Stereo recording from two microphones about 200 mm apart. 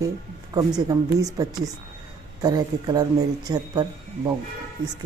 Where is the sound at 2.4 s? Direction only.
20° right (ahead or behind).